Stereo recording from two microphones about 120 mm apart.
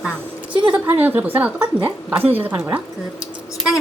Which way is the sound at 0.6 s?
15° right (ahead or behind).